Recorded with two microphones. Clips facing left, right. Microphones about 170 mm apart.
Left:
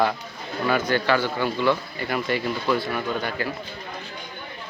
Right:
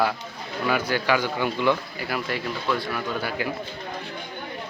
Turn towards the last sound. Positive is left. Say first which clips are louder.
# left 2 dB
turn(degrees=0)  # may be behind; listen again after turning